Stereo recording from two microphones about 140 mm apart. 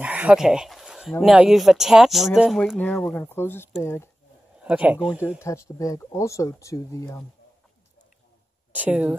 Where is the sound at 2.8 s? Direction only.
10° left (ahead or behind).